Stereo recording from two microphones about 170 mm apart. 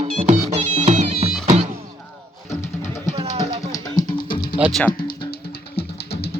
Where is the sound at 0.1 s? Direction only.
40° right (ahead or behind).